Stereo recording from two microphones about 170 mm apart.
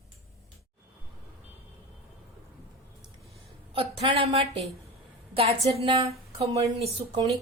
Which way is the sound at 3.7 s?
35° right (ahead or behind).